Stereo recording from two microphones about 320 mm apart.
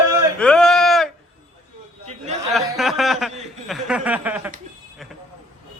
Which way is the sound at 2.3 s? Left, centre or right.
Right.